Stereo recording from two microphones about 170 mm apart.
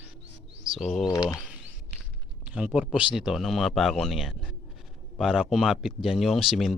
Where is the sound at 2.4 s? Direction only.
5° right (ahead or behind).